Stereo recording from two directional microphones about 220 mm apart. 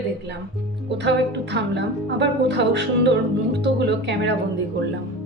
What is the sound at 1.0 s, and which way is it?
Speech, 50° right (ahead or behind).